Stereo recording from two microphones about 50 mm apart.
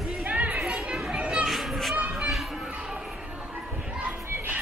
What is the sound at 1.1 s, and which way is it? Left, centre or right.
Children playing, centre.